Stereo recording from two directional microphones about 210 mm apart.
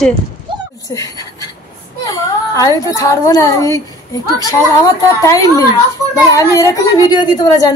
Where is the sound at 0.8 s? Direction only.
15° left (ahead or behind).